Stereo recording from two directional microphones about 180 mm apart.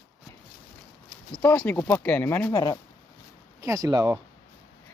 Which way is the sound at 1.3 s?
5° left (ahead or behind).